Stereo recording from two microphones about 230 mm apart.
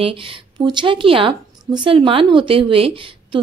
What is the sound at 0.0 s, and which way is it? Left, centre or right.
A woman's voice, right.